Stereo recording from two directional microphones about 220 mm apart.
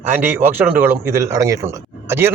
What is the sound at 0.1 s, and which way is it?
Speech, 10° right (ahead or behind).